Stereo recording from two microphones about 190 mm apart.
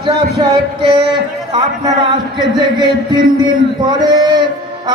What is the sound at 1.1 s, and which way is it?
A man's voice, 25° right (ahead or behind).